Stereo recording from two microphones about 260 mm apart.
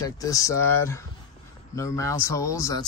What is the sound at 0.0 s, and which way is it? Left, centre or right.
Speech, centre.